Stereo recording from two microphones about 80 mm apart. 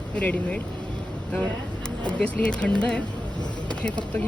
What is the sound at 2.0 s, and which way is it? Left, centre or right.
Speech, centre.